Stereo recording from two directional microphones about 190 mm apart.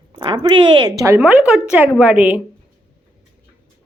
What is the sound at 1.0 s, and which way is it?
Speech, 10° right (ahead or behind).